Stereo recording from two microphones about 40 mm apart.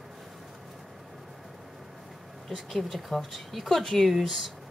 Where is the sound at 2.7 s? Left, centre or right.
Centre.